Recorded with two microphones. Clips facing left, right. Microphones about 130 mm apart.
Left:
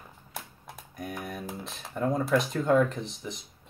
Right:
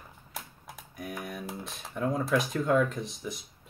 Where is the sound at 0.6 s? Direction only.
Centre (ahead or behind).